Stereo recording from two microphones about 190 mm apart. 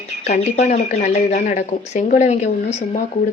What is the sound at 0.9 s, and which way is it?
Speech, 50° left (ahead or behind).